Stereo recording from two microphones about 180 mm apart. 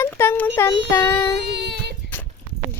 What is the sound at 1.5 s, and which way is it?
Child singing, 70° right (ahead or behind).